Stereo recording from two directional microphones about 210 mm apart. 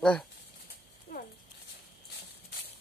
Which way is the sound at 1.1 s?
50° left (ahead or behind).